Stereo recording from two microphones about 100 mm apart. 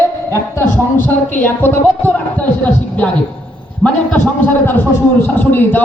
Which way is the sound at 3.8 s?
10° left (ahead or behind).